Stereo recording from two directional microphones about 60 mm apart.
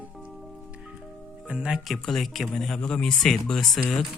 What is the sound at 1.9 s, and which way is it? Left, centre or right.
A man's voice, centre.